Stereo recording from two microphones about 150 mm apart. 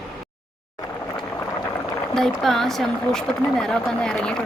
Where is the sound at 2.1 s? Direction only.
Centre (ahead or behind).